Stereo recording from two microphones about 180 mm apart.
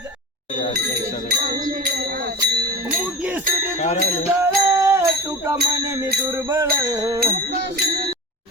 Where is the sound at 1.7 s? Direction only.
60° right (ahead or behind).